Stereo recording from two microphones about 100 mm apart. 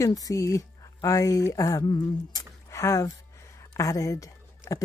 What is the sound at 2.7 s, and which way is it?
A woman's voice, 30° left (ahead or behind).